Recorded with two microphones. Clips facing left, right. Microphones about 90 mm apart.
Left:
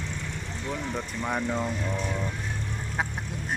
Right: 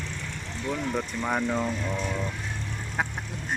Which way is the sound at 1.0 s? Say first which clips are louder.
Right 2 dB; 5° right (ahead or behind).